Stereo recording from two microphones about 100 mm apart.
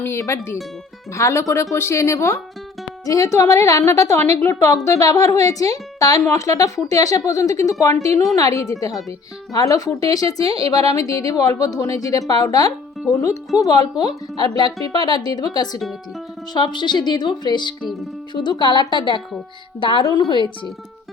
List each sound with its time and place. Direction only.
0.0 s a woman's voice: 30° left (ahead or behind); by 20.1 s 55° left (ahead or behind)